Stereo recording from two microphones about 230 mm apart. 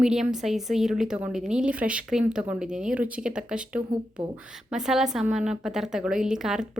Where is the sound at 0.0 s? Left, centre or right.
Centre.